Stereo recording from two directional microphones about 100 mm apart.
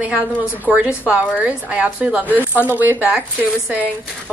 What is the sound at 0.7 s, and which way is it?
A woman's voice, 10° right (ahead or behind).